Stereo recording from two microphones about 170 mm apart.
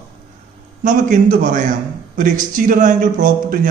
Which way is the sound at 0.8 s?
50° right (ahead or behind).